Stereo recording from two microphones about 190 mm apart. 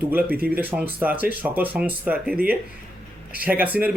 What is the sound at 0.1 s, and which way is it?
Speech, 10° right (ahead or behind).